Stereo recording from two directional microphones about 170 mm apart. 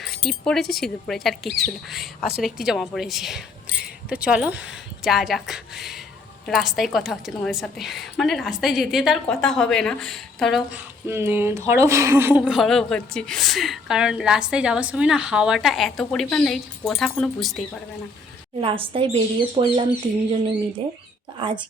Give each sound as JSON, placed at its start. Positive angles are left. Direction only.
{"t": 0.3, "sound": "a woman's voice", "side_deg": 0}
{"t": 18.6, "sound": "speech", "side_deg": -30}
{"t": 21.3, "sound": "speech", "side_deg": -30}